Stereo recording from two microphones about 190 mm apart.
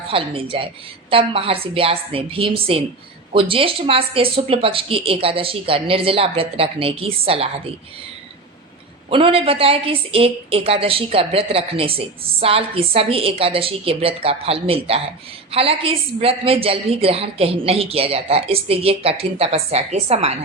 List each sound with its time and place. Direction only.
0.1 s a woman's voice: 30° right (ahead or behind)
9.0 s a woman's voice: 30° right (ahead or behind)